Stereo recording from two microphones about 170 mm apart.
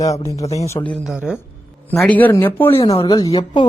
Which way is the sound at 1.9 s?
10° left (ahead or behind).